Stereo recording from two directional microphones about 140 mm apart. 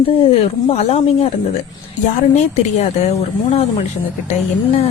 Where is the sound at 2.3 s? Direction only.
55° left (ahead or behind).